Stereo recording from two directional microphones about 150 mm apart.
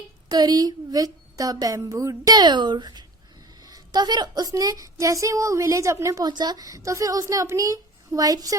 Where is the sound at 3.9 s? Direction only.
30° right (ahead or behind).